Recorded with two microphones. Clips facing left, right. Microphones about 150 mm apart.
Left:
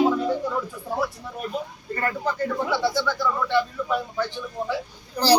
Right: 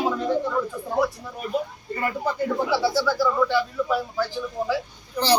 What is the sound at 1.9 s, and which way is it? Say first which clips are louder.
A man's voice: even; 10° right (ahead or behind).